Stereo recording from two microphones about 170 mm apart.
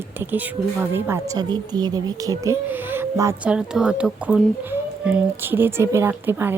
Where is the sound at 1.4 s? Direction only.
25° right (ahead or behind).